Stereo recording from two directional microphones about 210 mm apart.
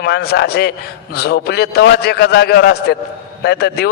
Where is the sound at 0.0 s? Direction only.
50° left (ahead or behind).